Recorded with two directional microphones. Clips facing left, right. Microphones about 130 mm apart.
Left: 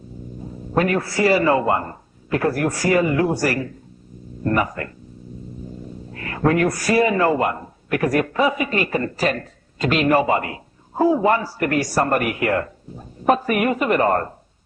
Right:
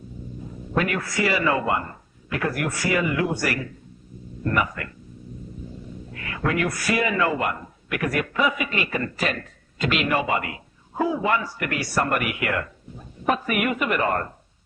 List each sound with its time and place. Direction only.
0.7 s speech: 35° left (ahead or behind)
6.1 s speech: 40° left (ahead or behind)